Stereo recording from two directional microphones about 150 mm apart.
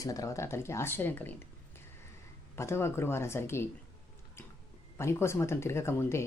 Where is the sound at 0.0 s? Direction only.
20° left (ahead or behind).